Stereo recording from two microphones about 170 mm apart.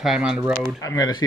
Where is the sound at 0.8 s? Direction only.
20° left (ahead or behind).